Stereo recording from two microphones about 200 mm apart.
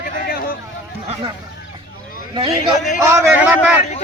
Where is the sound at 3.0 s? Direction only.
15° right (ahead or behind).